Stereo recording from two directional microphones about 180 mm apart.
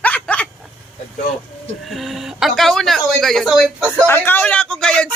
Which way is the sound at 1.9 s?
Centre (ahead or behind).